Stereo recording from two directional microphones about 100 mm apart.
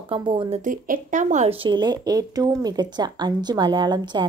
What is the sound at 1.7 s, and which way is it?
A woman's voice, 45° right (ahead or behind).